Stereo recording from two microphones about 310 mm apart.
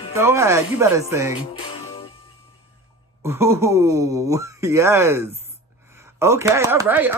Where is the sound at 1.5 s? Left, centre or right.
Centre.